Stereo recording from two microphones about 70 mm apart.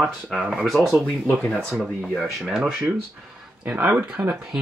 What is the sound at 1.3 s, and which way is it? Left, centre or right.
Speech, centre.